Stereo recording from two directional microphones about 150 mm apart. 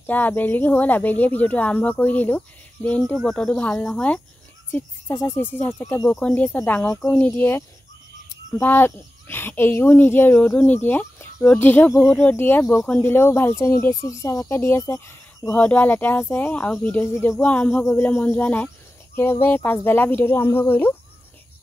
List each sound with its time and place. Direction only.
0.0 s speech: 10° left (ahead or behind)